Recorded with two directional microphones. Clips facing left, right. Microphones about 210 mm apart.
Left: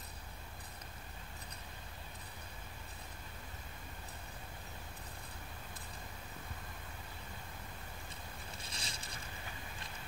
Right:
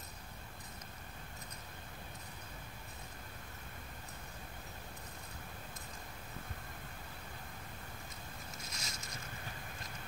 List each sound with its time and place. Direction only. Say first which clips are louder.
8.6 s boat: even; 30° left (ahead or behind)